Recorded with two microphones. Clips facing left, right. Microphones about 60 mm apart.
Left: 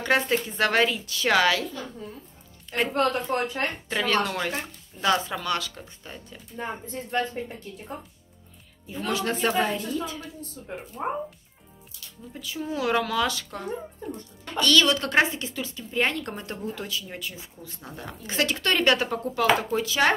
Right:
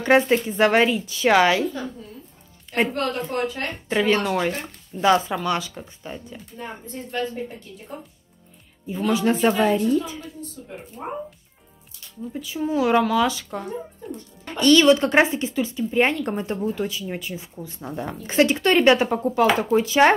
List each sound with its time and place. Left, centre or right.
0.5 s speech: centre
2.9 s a woman's voice: left
3.9 s speech: centre
8.9 s speech: centre
9.5 s speech: right
11.0 s a woman's voice: left
12.3 s speech: centre
14.4 s speech: right